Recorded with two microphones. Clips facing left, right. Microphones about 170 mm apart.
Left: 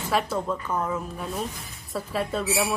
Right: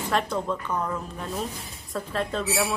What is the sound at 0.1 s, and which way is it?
Speech, 5° left (ahead or behind).